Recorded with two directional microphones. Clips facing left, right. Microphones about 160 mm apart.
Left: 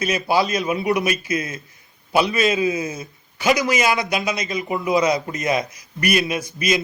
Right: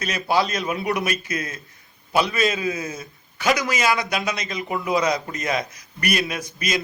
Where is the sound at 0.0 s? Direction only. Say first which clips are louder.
Left 2 dB; 10° left (ahead or behind).